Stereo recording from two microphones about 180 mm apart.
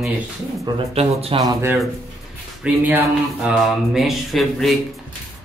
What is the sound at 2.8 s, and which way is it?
Speech, 5° right (ahead or behind).